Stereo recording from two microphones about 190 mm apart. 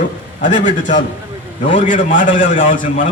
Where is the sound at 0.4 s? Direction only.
40° left (ahead or behind).